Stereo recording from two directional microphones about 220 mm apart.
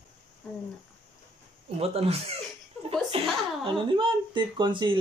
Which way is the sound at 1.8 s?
25° right (ahead or behind).